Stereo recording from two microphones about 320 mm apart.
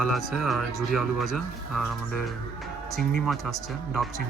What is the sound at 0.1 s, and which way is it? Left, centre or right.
Speech, centre.